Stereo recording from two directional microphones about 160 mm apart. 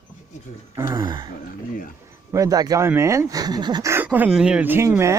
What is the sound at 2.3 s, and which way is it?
Speech, 20° right (ahead or behind).